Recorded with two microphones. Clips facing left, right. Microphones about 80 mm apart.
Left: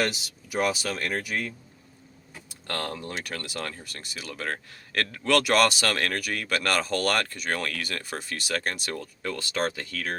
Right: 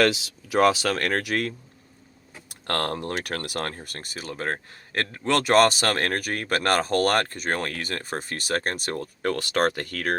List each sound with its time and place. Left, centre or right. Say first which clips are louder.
0.6 s speech: right 7 dB; right
2.5 s speech: right 5 dB; right
9.2 s speech: right 6 dB; right